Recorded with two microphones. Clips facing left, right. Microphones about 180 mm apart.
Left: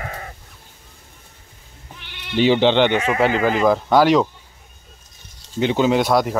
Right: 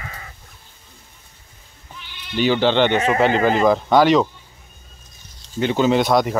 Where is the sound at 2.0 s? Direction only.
65° left (ahead or behind).